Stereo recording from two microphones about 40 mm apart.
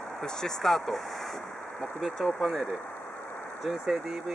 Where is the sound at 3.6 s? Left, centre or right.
Centre.